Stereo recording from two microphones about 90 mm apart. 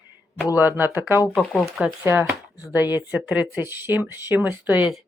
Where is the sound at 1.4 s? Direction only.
Centre (ahead or behind).